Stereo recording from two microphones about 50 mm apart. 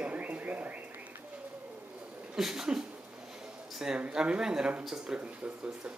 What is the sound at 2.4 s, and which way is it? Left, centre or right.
Speech, centre.